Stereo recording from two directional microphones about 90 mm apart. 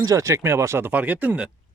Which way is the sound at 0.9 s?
15° right (ahead or behind).